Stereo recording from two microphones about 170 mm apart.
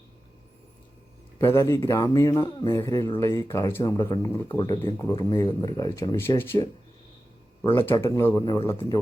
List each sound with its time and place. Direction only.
1.4 s speech: 15° left (ahead or behind)
7.8 s speech: 15° left (ahead or behind)